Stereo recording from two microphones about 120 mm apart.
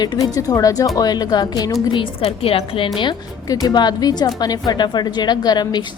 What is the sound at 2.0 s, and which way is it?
Speech, 50° left (ahead or behind).